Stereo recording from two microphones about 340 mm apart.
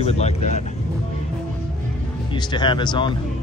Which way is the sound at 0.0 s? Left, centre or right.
Centre.